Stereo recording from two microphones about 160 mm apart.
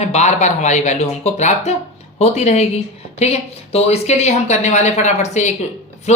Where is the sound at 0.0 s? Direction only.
45° left (ahead or behind).